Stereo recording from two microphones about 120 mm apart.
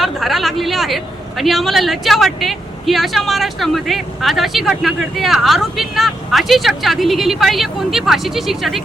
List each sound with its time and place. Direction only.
0.0 s a woman's voice: centre (ahead or behind)